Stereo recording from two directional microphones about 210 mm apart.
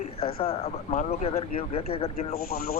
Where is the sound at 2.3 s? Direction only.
45° left (ahead or behind).